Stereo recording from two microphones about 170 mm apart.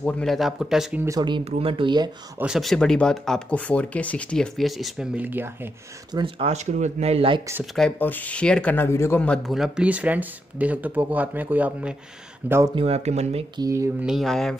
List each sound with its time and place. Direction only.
0.0 s speech: 5° left (ahead or behind)
1.0 s speech: 25° right (ahead or behind)
2.3 s speech: 5° right (ahead or behind)
6.1 s speech: 30° right (ahead or behind)
7.7 s speech: 5° left (ahead or behind); by 12.7 s 15° right (ahead or behind)
12.7 s speech: 35° right (ahead or behind)
13.6 s speech: 20° right (ahead or behind)
14.0 s speech: centre (ahead or behind)